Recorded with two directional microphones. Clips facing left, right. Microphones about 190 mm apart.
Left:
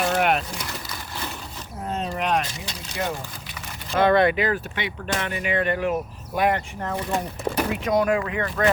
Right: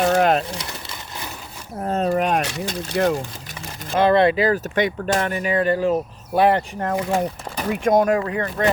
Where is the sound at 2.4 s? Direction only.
65° right (ahead or behind).